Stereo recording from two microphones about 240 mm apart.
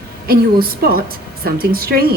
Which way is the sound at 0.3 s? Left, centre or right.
Right.